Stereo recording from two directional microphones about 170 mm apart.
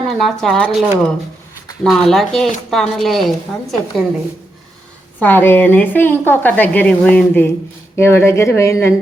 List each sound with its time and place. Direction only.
0.2 s a woman's voice: 5° left (ahead or behind)
5.2 s a woman's voice: 10° left (ahead or behind)